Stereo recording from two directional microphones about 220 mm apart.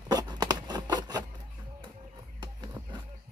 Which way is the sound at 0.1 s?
15° right (ahead or behind).